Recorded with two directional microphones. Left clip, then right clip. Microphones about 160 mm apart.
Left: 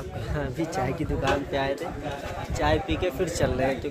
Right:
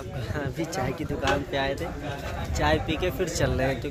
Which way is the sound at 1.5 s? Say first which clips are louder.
Even; 20° right (ahead or behind).